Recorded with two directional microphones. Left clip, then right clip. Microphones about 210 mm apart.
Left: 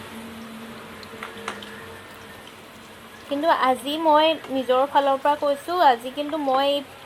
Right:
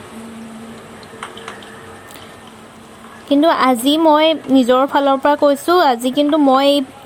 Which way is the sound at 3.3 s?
45° right (ahead or behind).